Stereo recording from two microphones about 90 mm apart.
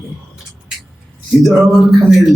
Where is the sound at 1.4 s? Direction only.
Centre (ahead or behind).